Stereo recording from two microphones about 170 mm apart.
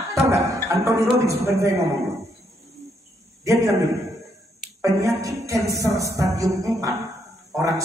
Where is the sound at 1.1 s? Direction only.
20° right (ahead or behind).